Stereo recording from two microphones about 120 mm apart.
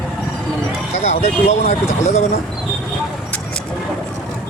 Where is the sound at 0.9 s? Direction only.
65° left (ahead or behind).